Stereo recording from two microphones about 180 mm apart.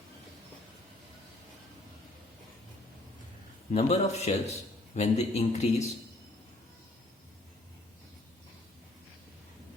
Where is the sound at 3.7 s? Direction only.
40° left (ahead or behind).